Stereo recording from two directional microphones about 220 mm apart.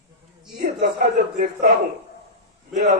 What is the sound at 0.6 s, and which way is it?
A man's voice, 45° right (ahead or behind).